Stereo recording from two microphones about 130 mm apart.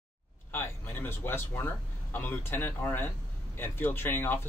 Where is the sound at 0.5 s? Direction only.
15° left (ahead or behind).